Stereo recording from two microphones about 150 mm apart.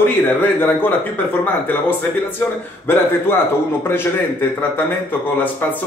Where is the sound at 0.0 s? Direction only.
15° left (ahead or behind).